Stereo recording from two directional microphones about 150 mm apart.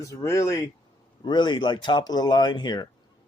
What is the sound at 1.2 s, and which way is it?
Speech, 30° left (ahead or behind).